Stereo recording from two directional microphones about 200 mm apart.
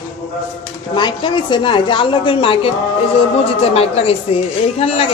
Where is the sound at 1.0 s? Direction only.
20° left (ahead or behind).